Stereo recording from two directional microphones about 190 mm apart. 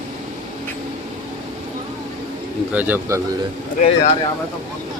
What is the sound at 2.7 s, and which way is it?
Speech, 10° right (ahead or behind).